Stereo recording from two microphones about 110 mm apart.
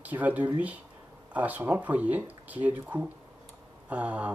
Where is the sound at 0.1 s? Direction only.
15° right (ahead or behind).